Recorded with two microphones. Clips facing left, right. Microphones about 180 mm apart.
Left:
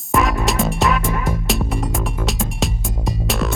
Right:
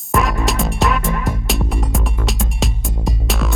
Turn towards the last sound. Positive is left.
turn(degrees=0)  # may be behind; listen again after turning